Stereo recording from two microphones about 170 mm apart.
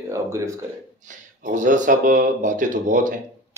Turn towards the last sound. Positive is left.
turn(degrees=-50)  # may be behind; listen again after turning